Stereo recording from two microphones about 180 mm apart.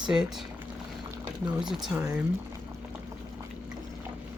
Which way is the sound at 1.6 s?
Centre (ahead or behind).